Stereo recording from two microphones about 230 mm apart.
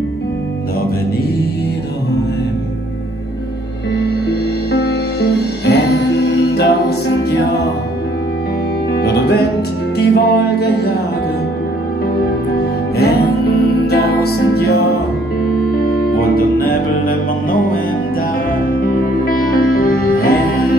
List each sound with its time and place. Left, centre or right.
4.3 s music: left
8.9 s music: left
12.9 s music: left
16.2 s music: left
19.1 s music: left